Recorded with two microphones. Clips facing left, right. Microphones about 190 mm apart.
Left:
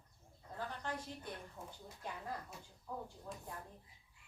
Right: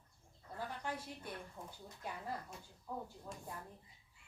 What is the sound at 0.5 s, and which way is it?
Speech, 10° right (ahead or behind).